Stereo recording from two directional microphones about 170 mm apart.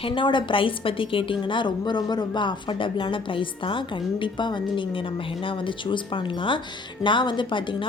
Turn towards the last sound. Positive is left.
turn(degrees=30)  # may be behind; listen again after turning